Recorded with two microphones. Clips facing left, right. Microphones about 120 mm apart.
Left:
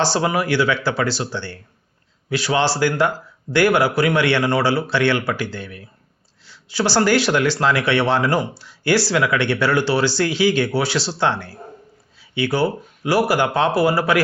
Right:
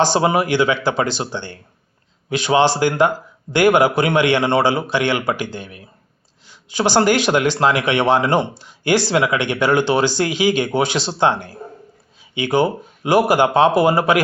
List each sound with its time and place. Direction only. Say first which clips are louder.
0.0 s speech: right 3 dB; 20° right (ahead or behind)